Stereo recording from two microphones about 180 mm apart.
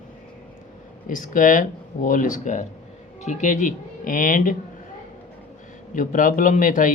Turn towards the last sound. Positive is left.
turn(degrees=45)  # may be behind; listen again after turning